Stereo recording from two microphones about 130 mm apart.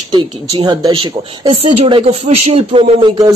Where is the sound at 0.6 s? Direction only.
35° right (ahead or behind).